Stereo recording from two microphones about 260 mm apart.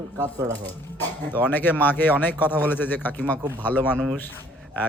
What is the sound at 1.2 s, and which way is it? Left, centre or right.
A man's voice, centre.